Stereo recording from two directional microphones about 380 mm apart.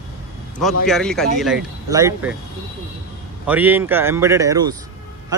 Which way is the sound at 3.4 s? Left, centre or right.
Centre.